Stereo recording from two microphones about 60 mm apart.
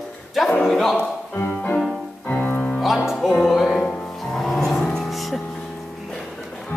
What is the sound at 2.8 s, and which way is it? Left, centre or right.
Music, centre.